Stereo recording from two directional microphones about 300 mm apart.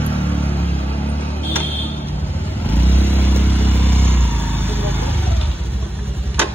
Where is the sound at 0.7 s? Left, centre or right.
Centre.